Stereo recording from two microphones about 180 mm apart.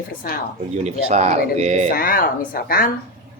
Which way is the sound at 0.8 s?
40° right (ahead or behind).